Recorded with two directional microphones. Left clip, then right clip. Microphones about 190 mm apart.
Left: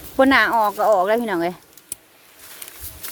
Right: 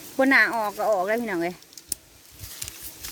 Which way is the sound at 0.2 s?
10° left (ahead or behind).